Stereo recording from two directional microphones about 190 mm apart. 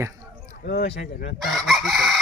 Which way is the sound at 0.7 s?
60° left (ahead or behind).